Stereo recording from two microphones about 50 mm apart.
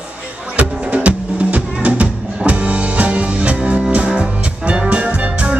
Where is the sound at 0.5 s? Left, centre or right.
Right.